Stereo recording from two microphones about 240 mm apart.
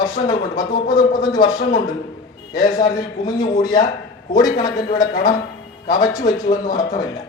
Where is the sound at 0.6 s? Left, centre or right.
Left.